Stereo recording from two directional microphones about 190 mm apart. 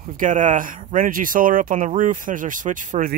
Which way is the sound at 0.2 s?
40° right (ahead or behind).